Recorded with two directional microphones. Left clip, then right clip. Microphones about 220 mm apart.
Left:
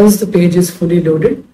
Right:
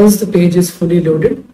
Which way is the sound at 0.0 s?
Centre (ahead or behind).